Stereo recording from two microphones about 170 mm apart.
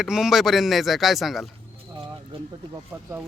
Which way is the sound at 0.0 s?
Centre (ahead or behind).